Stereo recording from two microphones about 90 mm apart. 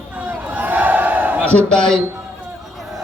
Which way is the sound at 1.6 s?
10° left (ahead or behind).